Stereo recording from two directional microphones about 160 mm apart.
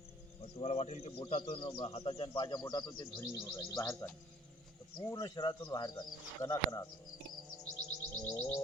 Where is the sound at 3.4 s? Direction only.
15° left (ahead or behind).